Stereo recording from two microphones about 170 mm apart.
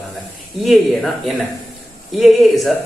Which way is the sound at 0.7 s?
Centre (ahead or behind).